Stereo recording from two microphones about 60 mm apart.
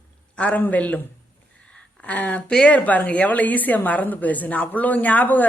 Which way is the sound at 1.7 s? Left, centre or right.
Centre.